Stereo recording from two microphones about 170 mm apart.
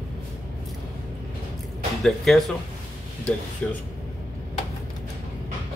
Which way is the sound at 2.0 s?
Centre (ahead or behind).